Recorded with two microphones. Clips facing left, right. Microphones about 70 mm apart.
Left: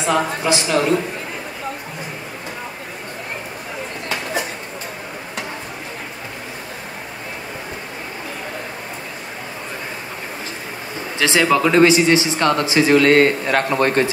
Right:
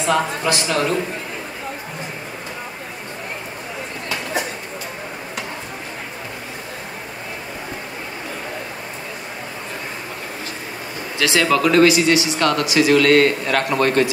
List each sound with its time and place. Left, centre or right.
0.0 s speech: left
11.1 s speech: left